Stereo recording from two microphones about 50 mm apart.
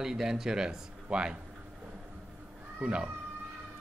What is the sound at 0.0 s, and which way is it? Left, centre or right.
Speech, centre.